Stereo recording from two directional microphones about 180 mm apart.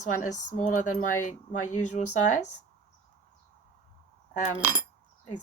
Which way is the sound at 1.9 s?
40° left (ahead or behind).